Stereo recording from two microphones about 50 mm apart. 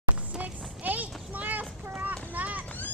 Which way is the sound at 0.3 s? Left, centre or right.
Centre.